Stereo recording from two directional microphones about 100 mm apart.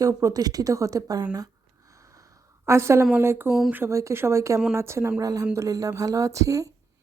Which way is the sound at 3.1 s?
25° right (ahead or behind).